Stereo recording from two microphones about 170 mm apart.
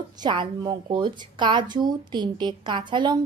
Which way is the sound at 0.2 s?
25° right (ahead or behind).